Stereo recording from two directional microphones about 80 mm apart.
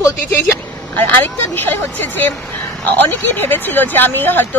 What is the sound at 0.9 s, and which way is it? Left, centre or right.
Speech, left.